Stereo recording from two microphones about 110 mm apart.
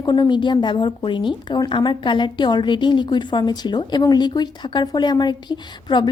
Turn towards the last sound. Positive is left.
turn(degrees=45)  # may be behind; listen again after turning